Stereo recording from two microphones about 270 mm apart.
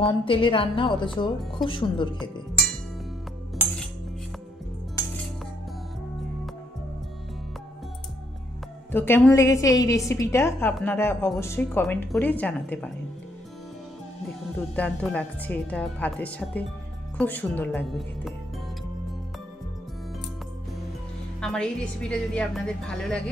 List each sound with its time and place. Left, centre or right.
0.0 s a woman's voice: centre
1.4 s speech: centre
1.7 s a woman's voice: centre
8.9 s a woman's voice: centre
14.8 s speech: centre
21.4 s a woman's voice: centre